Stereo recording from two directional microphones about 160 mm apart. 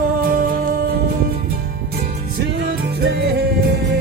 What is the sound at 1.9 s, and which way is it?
Music, 75° right (ahead or behind).